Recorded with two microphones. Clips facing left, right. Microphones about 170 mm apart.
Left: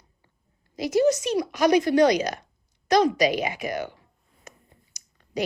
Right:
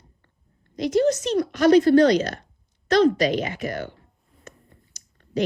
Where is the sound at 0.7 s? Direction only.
10° left (ahead or behind).